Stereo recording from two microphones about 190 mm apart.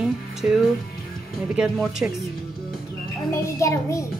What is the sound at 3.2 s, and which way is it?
Speech, 15° left (ahead or behind).